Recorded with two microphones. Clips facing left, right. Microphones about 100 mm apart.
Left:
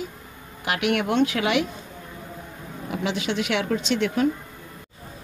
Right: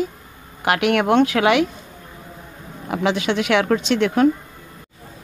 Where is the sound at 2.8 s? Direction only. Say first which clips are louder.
Right 6 dB; 65° right (ahead or behind).